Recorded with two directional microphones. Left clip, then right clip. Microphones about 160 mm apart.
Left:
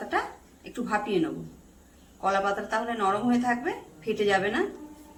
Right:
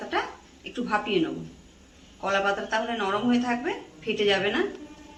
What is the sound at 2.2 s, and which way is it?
Speech, 10° left (ahead or behind).